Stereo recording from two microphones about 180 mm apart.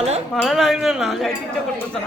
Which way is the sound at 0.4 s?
Centre (ahead or behind).